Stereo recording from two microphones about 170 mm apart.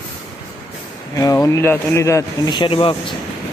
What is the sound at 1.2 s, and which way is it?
Speech, 20° left (ahead or behind).